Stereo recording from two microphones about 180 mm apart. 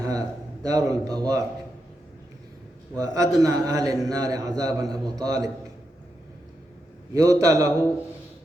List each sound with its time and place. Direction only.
0.0 s speech: 20° right (ahead or behind)
3.0 s a man's voice: 20° right (ahead or behind)
7.1 s a man's voice: 20° right (ahead or behind)